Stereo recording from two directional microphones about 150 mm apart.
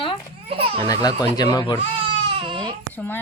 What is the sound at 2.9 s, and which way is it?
Speech, 15° left (ahead or behind).